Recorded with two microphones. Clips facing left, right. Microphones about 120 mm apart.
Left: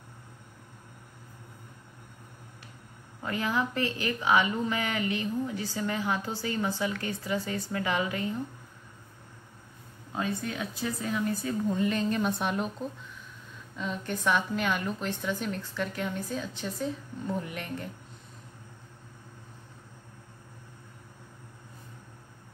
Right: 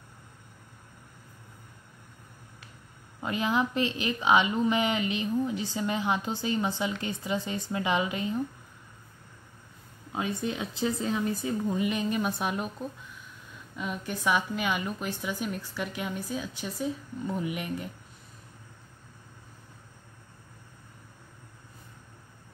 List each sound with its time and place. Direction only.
3.2 s speech: 20° right (ahead or behind)
10.1 s a woman's voice: 20° right (ahead or behind)
13.7 s a woman's voice: 10° right (ahead or behind)